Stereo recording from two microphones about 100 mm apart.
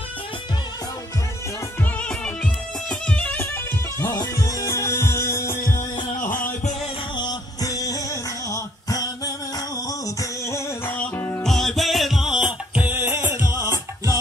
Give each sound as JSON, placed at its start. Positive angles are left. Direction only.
{"t": 2.0, "sound": "music", "side_deg": 10}
{"t": 4.1, "sound": "music", "side_deg": 35}
{"t": 7.2, "sound": "music", "side_deg": 40}
{"t": 9.8, "sound": "a sound", "side_deg": 35}
{"t": 11.4, "sound": "music", "side_deg": 5}